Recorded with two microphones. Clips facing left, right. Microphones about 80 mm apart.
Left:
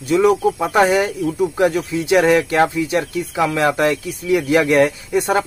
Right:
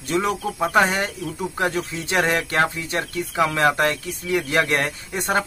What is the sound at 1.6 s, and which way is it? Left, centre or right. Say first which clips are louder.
Speech: left 5 dB; right.